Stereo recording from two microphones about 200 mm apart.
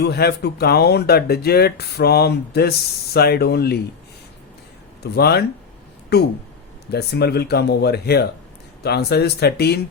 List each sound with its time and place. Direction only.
0.0 s speech: 55° left (ahead or behind)
5.1 s speech: 55° left (ahead or behind)